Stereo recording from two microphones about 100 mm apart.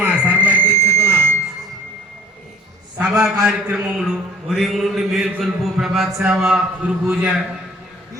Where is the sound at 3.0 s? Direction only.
10° right (ahead or behind).